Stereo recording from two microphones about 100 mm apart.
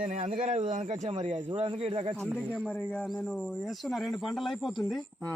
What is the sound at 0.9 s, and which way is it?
A man's voice, 80° right.